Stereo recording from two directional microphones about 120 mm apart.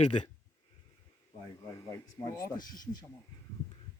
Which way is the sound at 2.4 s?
35° left (ahead or behind).